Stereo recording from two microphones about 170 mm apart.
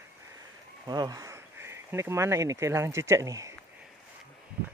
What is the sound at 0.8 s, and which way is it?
Speech, 20° right (ahead or behind).